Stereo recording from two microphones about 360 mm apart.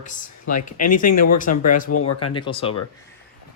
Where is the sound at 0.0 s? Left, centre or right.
Left.